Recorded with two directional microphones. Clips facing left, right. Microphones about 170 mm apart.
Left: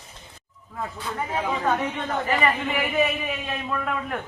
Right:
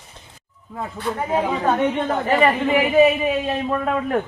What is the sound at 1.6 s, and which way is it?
A woman's voice, 35° right (ahead or behind).